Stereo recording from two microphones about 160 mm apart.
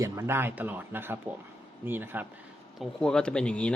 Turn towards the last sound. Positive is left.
turn(degrees=5)  # may be behind; listen again after turning